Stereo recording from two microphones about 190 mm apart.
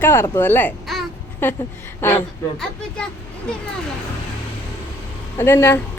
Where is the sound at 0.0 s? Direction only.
10° left (ahead or behind).